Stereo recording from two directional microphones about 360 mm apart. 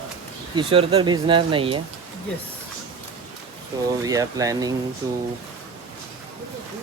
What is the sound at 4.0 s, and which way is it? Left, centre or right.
Speech, centre.